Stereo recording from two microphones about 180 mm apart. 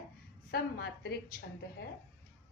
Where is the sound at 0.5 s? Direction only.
60° left (ahead or behind).